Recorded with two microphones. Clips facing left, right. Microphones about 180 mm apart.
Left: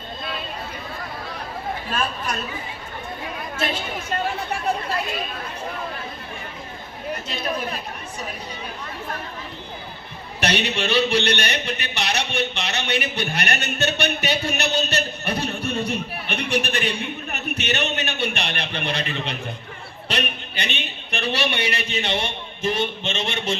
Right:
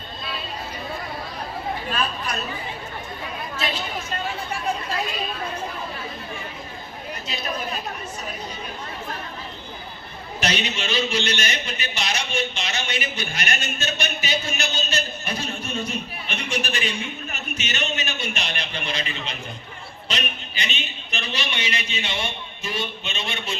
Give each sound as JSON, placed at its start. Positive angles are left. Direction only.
{"t": 2.0, "sound": "speech", "side_deg": 45}
{"t": 7.3, "sound": "speech", "side_deg": 55}
{"t": 10.4, "sound": "speech", "side_deg": 60}